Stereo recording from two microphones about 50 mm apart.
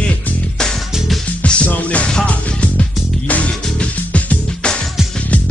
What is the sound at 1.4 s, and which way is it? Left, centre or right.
Music, left.